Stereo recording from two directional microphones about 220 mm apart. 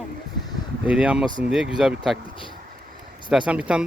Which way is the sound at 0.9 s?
5° right (ahead or behind).